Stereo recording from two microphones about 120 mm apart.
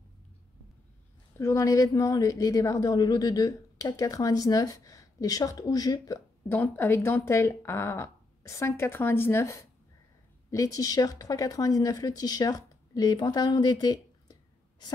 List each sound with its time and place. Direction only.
1.4 s a woman's voice: 25° left (ahead or behind)
6.5 s a woman's voice: 15° left (ahead or behind); by 15.0 s 35° left (ahead or behind)